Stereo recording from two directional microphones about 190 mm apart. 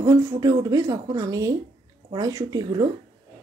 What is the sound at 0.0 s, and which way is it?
A woman's voice, 20° right (ahead or behind).